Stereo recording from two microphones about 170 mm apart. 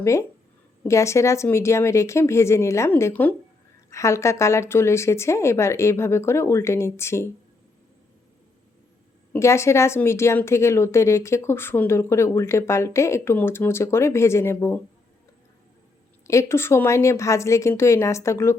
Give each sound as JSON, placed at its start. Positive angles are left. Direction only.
{"t": 0.0, "sound": "a woman's voice", "side_deg": 15}
{"t": 9.3, "sound": "a woman's voice", "side_deg": 15}
{"t": 16.2, "sound": "a woman's voice", "side_deg": 15}